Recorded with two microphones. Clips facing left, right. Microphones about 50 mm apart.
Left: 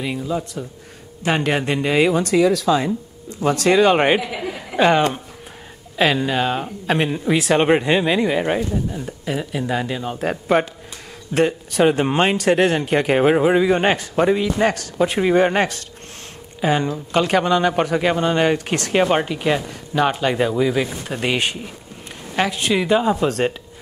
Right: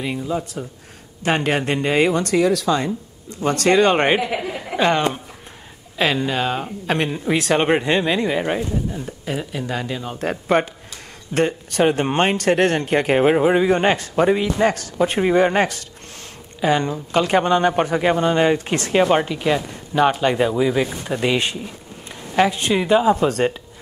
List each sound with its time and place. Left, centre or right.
0.0 s speech: centre
4.7 s speech: centre
15.2 s speech: centre
16.6 s speech: centre
17.6 s speech: centre
18.1 s speech: centre
21.2 s speech: centre
22.8 s speech: centre